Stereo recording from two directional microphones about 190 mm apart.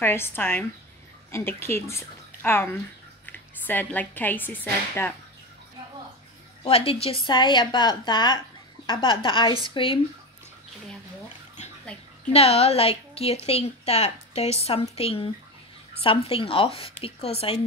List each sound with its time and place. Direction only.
0.0 s a woman's voice: 10° left (ahead or behind)
6.6 s a woman's voice: 30° left (ahead or behind)
12.3 s a woman's voice: 30° left (ahead or behind)